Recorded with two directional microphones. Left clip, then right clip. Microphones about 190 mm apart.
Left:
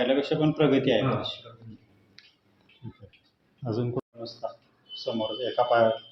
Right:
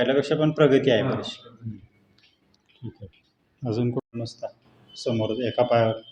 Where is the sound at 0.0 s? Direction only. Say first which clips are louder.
Right 3 dB; 55° right (ahead or behind).